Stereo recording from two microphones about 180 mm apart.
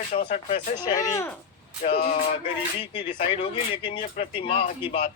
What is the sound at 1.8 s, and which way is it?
Speech, 40° left (ahead or behind).